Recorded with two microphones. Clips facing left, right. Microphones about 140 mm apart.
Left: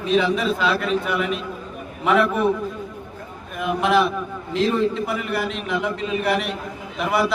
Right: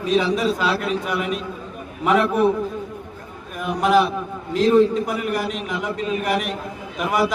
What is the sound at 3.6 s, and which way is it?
A man's voice, 40° right (ahead or behind).